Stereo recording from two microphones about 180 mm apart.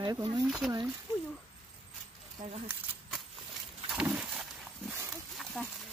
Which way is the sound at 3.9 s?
5° right (ahead or behind).